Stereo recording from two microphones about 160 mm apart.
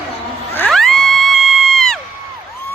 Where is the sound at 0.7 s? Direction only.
5° left (ahead or behind).